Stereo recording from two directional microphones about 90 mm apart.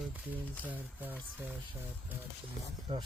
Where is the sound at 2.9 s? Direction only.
90° right.